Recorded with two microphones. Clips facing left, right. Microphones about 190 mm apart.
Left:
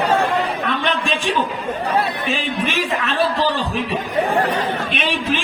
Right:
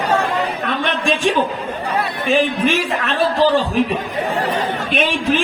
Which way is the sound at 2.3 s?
45° right (ahead or behind).